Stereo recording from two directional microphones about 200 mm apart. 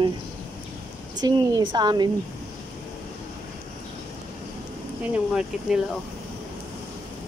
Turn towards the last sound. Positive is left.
turn(degrees=-5)  # may be behind; listen again after turning